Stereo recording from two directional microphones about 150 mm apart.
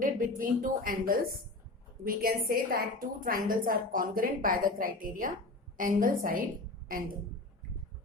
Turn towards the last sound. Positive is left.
turn(degrees=-70)  # may be behind; listen again after turning